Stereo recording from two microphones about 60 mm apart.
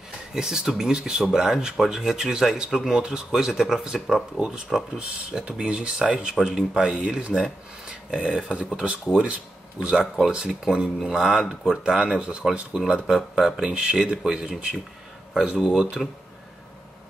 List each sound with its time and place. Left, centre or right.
0.3 s speech: centre